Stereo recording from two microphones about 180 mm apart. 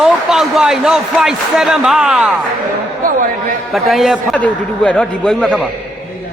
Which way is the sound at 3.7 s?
Centre (ahead or behind).